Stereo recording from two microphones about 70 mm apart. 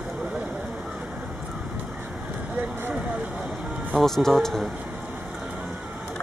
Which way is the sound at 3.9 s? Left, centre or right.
Centre.